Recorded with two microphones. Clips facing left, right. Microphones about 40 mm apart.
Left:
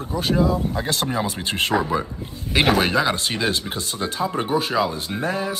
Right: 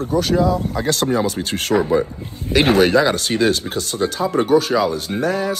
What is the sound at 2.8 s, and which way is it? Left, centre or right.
Speech, centre.